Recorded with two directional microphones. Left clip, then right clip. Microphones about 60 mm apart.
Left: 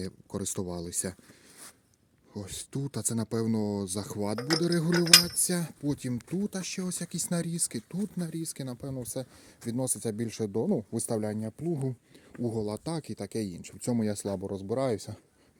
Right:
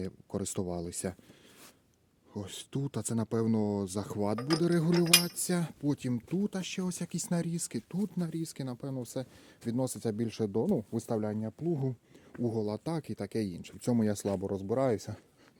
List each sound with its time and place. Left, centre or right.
0.0 s speech: centre
2.3 s speech: centre
5.0 s cutlery: centre
5.9 s speech: centre
7.3 s cutlery: left
7.9 s speech: left
9.7 s speech: centre
10.6 s cutlery: left
10.9 s speech: left
12.4 s speech: centre
13.7 s speech: centre
14.1 s speech: right
14.4 s speech: centre